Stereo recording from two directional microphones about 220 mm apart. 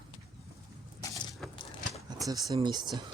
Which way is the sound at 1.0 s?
20° left (ahead or behind).